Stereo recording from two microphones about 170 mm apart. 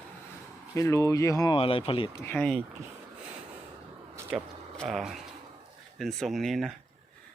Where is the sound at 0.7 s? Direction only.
15° left (ahead or behind).